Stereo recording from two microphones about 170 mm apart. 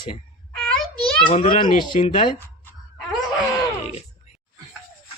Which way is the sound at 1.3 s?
40° left (ahead or behind).